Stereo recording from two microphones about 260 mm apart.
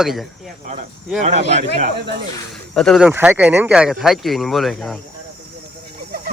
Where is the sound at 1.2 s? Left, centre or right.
Right.